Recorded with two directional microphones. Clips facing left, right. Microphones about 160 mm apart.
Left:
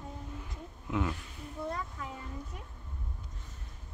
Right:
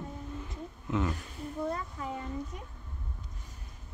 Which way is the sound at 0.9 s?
10° left (ahead or behind).